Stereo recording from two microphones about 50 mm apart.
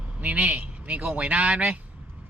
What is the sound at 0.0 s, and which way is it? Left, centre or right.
A man's voice, right.